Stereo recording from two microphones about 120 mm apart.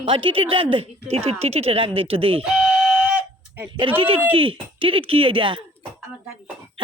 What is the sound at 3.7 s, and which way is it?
Speech, 45° right (ahead or behind).